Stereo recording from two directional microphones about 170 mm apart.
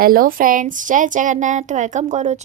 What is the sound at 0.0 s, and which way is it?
A woman's voice, 55° right (ahead or behind).